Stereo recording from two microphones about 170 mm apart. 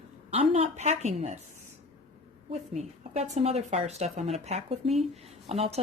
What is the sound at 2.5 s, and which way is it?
A woman's voice, 40° right (ahead or behind).